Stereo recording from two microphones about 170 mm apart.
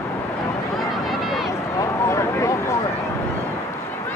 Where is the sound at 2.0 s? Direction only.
15° left (ahead or behind).